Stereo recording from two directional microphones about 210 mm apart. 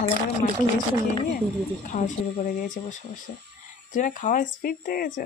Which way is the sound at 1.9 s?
35° left (ahead or behind).